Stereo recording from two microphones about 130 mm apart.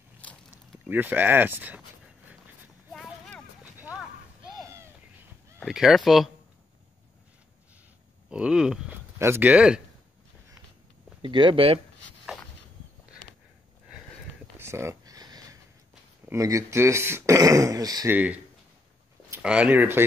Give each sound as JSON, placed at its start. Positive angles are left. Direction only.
{"t": 0.8, "sound": "speech", "side_deg": -15}
{"t": 2.9, "sound": "a sound", "side_deg": 5}
{"t": 5.7, "sound": "speech", "side_deg": -5}
{"t": 8.3, "sound": "speech", "side_deg": -5}
{"t": 9.2, "sound": "speech", "side_deg": -15}
{"t": 11.2, "sound": "speech", "side_deg": -40}
{"t": 14.6, "sound": "a sound", "side_deg": -20}
{"t": 16.3, "sound": "speech", "side_deg": -25}
{"t": 18.1, "sound": "speech", "side_deg": -10}
{"t": 19.4, "sound": "speech", "side_deg": -10}